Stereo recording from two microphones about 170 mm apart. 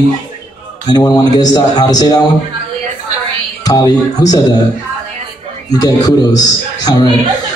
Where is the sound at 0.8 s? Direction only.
25° left (ahead or behind).